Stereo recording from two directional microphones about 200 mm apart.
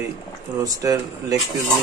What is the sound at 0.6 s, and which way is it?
Speech, 15° right (ahead or behind).